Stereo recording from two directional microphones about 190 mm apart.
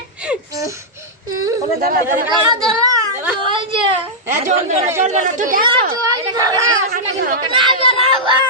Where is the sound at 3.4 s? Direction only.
25° right (ahead or behind).